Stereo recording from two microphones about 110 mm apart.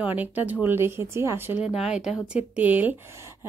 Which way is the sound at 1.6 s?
5° right (ahead or behind).